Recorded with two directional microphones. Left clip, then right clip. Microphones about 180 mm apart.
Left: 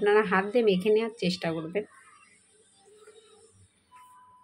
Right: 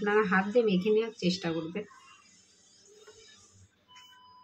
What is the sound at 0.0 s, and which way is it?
Speech, 50° left (ahead or behind).